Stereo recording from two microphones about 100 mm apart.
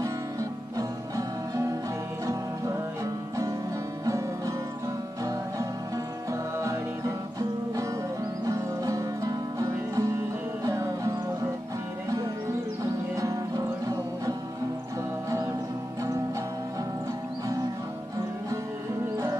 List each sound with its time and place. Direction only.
0.0 s music: 35° right (ahead or behind)
4.0 s music: 30° right (ahead or behind)
13.1 s music: 30° right (ahead or behind)
15.2 s music: 30° right (ahead or behind)